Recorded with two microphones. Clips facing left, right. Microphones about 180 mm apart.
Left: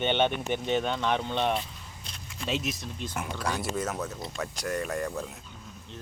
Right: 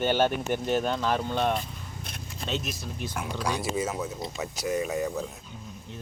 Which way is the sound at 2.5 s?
Centre (ahead or behind).